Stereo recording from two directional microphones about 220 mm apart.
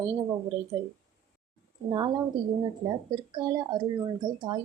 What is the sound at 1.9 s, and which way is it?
A woman's voice, 20° right (ahead or behind).